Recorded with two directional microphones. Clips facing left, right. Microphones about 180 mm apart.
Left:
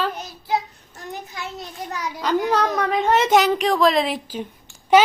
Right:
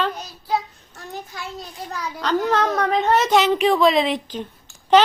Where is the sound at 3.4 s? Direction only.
Centre (ahead or behind).